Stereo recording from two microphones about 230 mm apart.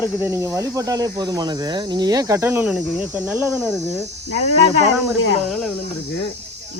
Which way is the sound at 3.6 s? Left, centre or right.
Centre.